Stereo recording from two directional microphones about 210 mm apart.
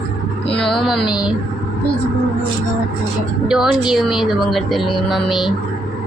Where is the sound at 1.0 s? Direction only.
20° left (ahead or behind).